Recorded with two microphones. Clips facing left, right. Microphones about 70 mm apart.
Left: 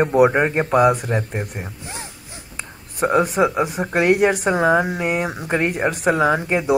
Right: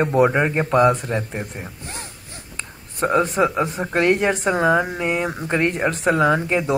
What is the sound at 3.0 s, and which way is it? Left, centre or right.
A woman's voice, centre.